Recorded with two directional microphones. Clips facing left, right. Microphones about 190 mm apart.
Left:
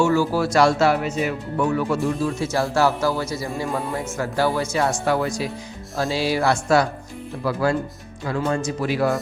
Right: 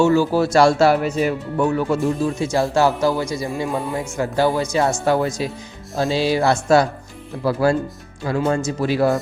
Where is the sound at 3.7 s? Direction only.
Centre (ahead or behind).